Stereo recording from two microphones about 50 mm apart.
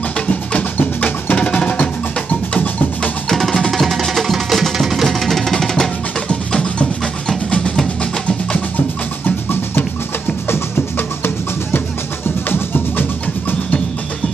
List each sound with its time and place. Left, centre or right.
0.7 s music: left
1.3 s music: left
3.3 s music: centre
7.2 s music: centre
9.2 s music: left